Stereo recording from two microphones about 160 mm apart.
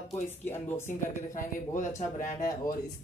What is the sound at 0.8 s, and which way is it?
Speech, 55° left (ahead or behind).